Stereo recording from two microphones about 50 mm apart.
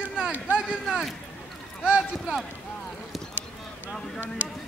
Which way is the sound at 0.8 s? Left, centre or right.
Centre.